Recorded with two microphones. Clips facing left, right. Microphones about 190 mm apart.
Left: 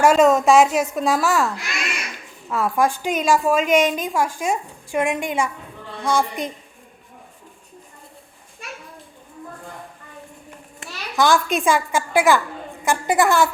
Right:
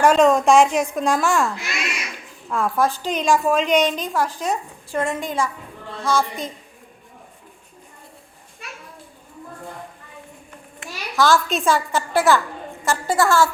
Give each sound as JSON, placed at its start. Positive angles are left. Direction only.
{"t": 0.0, "sound": "speech", "side_deg": 5}
{"t": 2.7, "sound": "speech", "side_deg": 15}
{"t": 3.1, "sound": "a woman's voice", "side_deg": 5}
{"t": 11.1, "sound": "a child's voice", "side_deg": 15}